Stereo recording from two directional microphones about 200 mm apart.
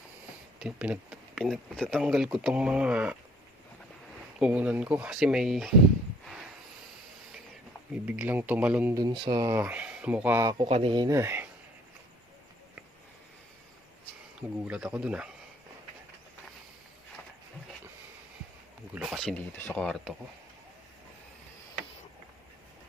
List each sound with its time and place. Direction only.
0.6 s speech: 5° right (ahead or behind)
4.4 s speech: 5° right (ahead or behind)
8.0 s speech: 10° right (ahead or behind)
9.0 s speech: 20° right (ahead or behind)
10.7 s speech: 30° right (ahead or behind); by 11.4 s 10° right (ahead or behind)
14.6 s speech: 5° right (ahead or behind)
18.9 s speech: centre (ahead or behind)